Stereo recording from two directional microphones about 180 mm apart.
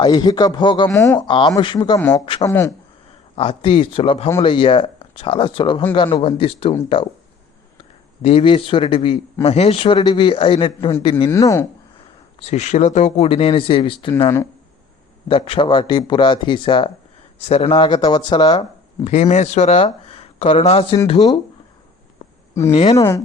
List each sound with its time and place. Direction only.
0.0 s speech: 25° left (ahead or behind)
1.3 s speech: 25° left (ahead or behind)
2.0 s speech: 10° left (ahead or behind)
2.2 s speech: 30° left (ahead or behind)
2.5 s speech: 15° left (ahead or behind)
3.3 s speech: 30° left (ahead or behind)
8.2 s speech: 35° left (ahead or behind)
11.3 s speech: 15° left (ahead or behind)
12.4 s speech: 35° left (ahead or behind)
15.3 s speech: 30° left (ahead or behind)
19.0 s speech: 40° left (ahead or behind)
22.7 s speech: 40° left (ahead or behind)
23.0 s speech: 15° left (ahead or behind)